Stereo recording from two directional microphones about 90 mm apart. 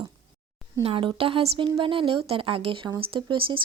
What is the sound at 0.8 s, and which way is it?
Speech, 85° right.